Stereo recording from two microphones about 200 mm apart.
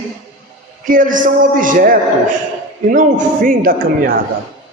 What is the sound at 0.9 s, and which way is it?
A man's voice, 40° right (ahead or behind).